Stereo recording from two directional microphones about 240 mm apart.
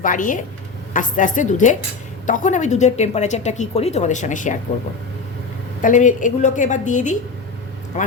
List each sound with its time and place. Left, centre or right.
0.0 s a woman's voice: left
5.8 s a woman's voice: left